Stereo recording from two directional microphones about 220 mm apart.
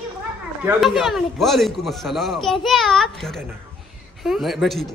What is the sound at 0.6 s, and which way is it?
Speech, 5° right (ahead or behind).